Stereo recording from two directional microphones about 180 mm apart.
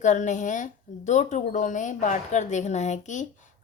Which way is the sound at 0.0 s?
40° left (ahead or behind).